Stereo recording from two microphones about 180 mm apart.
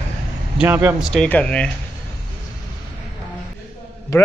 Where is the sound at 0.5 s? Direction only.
10° right (ahead or behind).